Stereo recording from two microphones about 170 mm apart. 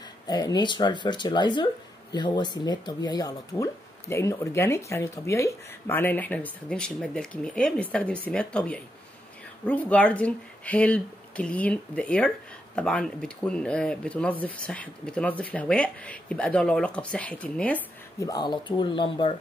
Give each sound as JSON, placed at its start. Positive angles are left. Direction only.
{"t": 0.3, "sound": "speech", "side_deg": 25}
{"t": 18.2, "sound": "speech", "side_deg": 25}